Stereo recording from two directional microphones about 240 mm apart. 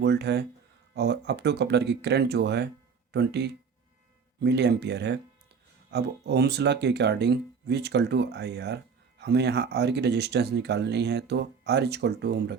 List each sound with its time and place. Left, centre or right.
0.0 s speech: right